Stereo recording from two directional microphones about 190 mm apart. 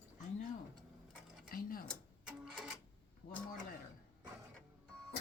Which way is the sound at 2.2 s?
Centre (ahead or behind).